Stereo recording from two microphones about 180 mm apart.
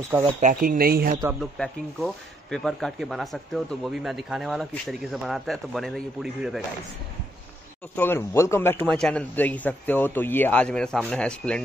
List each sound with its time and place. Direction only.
0.2 s speech: 45° right (ahead or behind)
1.4 s speech: centre (ahead or behind)
7.9 s speech: 10° left (ahead or behind)